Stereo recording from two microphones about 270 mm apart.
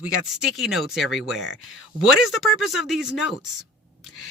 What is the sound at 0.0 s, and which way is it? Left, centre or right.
Speech, centre.